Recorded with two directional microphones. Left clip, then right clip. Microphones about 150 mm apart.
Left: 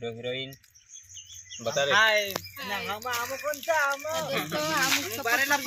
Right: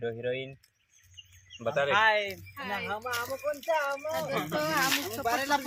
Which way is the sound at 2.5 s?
5° left (ahead or behind).